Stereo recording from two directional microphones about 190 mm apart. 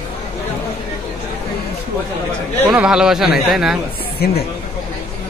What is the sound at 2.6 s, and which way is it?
Speech, 5° right (ahead or behind).